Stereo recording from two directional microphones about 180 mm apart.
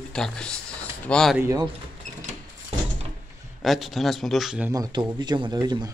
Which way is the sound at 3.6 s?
Centre (ahead or behind).